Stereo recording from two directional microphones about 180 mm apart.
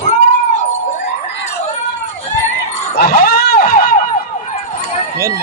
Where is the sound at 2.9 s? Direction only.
55° left (ahead or behind).